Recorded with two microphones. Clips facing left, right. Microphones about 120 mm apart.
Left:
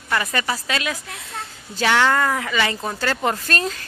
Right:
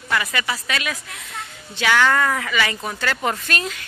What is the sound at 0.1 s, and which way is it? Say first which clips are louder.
A woman's voice: left 1 dB; 35° left (ahead or behind).